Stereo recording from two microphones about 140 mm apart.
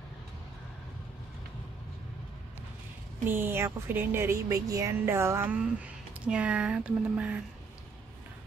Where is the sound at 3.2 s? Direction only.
15° right (ahead or behind).